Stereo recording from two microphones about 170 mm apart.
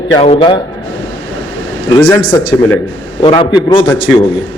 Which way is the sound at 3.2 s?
30° left (ahead or behind).